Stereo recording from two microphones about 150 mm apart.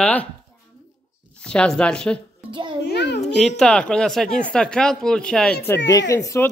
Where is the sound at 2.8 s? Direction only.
90° left.